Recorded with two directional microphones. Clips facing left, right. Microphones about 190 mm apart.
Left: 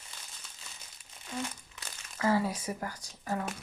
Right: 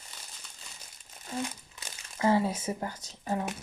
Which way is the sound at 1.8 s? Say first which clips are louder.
Right 3 dB; 25° right (ahead or behind).